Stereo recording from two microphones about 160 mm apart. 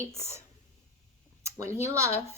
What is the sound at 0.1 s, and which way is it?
Speech, 15° right (ahead or behind).